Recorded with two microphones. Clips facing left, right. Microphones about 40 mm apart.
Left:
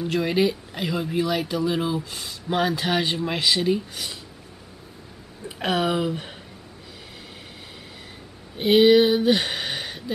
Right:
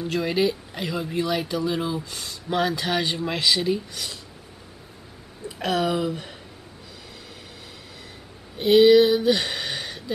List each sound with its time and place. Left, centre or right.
0.0 s speech: centre
5.6 s speech: centre
8.5 s speech: centre